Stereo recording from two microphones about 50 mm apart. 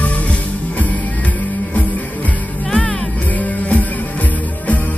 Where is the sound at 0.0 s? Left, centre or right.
Left.